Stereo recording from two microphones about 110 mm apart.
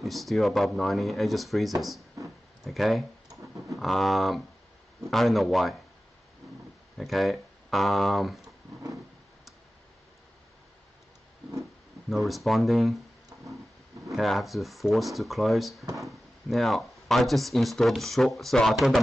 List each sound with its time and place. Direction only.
0.0 s speech: centre (ahead or behind)
7.0 s speech: centre (ahead or behind)
12.1 s speech: centre (ahead or behind)
13.3 s a sound: 25° right (ahead or behind)
14.1 s speech: centre (ahead or behind)